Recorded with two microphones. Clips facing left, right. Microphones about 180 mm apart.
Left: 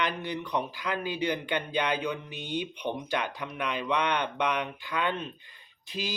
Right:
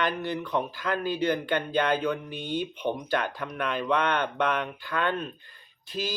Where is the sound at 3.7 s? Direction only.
50° right (ahead or behind).